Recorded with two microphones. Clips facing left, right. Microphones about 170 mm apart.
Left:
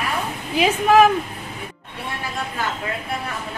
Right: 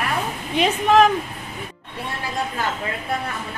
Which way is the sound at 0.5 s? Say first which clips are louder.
Left 1 dB; 5° left (ahead or behind).